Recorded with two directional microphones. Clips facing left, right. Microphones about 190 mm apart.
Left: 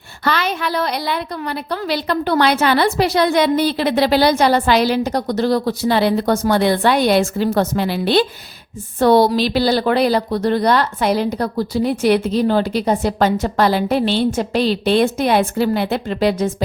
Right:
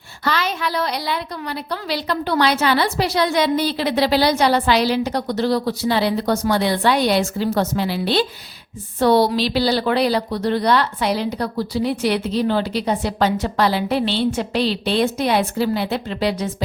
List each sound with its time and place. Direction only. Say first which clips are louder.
0.3 s a woman's voice: left 2 dB; 60° left (ahead or behind)